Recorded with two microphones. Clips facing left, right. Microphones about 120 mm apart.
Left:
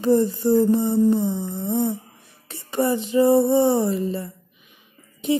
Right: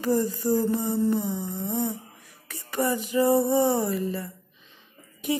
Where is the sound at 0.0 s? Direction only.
25° left (ahead or behind).